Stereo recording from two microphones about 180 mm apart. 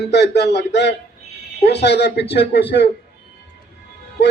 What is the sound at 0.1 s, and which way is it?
A man's voice, 70° left (ahead or behind).